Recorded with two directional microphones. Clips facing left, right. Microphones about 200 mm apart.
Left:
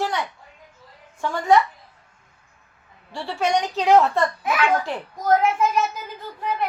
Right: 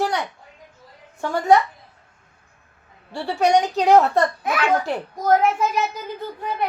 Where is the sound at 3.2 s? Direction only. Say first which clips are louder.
Right 4 dB; 40° right (ahead or behind).